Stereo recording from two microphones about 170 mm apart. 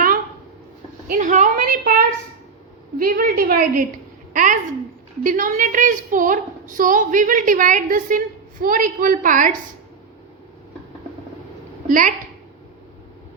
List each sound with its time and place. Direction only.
1.0 s a woman's voice: 50° right (ahead or behind)
1.8 s a woman's voice: 60° right (ahead or behind)
11.9 s a woman's voice: 50° right (ahead or behind)